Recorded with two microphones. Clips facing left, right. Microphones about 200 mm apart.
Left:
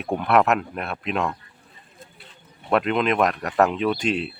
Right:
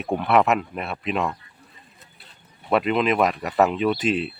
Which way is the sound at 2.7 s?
Centre (ahead or behind).